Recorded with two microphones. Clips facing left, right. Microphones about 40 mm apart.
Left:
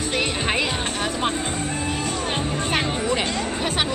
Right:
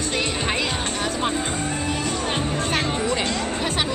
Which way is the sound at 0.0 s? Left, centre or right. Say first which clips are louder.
Left 1 dB; centre.